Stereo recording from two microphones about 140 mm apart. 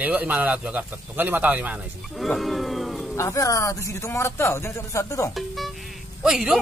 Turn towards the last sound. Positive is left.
turn(degrees=-5)  # may be behind; listen again after turning